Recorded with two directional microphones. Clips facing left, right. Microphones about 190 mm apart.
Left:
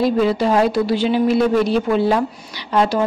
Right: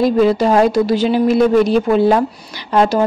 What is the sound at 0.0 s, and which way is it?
A woman's voice, 45° right (ahead or behind).